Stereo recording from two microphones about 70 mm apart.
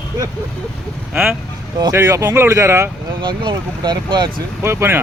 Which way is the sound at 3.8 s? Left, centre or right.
Right.